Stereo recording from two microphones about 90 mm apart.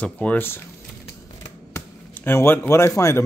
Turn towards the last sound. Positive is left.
turn(degrees=30)  # may be behind; listen again after turning